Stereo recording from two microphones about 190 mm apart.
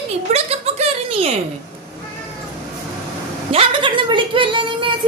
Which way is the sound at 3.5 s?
25° right (ahead or behind).